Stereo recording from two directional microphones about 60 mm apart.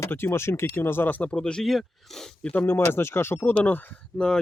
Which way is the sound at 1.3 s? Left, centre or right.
Centre.